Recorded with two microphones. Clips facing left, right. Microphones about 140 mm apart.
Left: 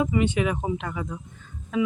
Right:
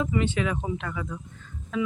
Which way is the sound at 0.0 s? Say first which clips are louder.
Left 3 dB; 15° left (ahead or behind).